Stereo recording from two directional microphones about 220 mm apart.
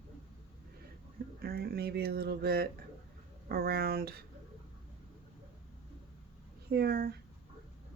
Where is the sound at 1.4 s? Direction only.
45° right (ahead or behind).